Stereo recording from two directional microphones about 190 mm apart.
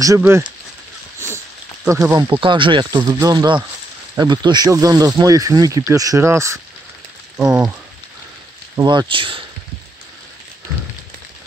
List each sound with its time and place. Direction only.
0.0 s speech: 15° right (ahead or behind)
1.9 s speech: 15° right (ahead or behind)
7.3 s speech: 5° right (ahead or behind)
8.7 s speech: 25° right (ahead or behind)